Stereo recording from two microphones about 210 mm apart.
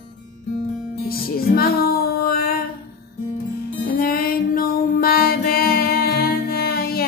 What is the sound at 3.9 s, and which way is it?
Music, 45° left (ahead or behind).